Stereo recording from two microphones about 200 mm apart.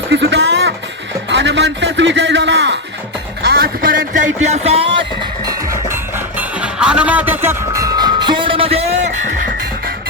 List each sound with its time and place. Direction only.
0.1 s music: 60° right (ahead or behind)
1.3 s a man's voice: 60° right (ahead or behind)
3.4 s music: 50° right (ahead or behind); by 5.0 s 30° right (ahead or behind)
6.6 s music: 5° right (ahead or behind); by 9.0 s 30° right (ahead or behind)